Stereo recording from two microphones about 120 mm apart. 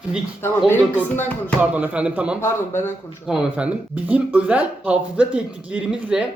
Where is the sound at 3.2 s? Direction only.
10° right (ahead or behind).